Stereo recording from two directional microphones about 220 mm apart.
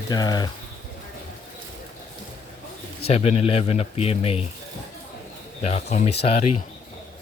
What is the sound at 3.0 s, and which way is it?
Speech, 25° left (ahead or behind).